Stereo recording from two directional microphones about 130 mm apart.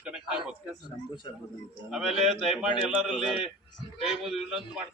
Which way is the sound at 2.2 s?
Centre (ahead or behind).